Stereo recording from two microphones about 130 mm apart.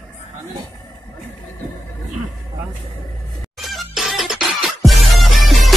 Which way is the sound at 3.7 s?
Centre (ahead or behind).